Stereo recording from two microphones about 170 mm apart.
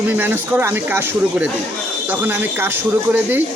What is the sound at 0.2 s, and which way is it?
Speech, 10° right (ahead or behind).